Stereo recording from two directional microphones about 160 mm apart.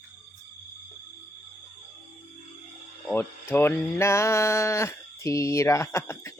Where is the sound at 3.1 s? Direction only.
15° left (ahead or behind).